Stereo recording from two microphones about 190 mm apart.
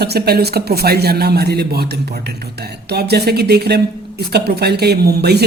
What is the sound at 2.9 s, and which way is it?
Speech, 60° right (ahead or behind).